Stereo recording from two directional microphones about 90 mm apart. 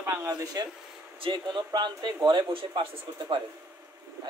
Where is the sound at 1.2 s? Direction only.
60° right (ahead or behind).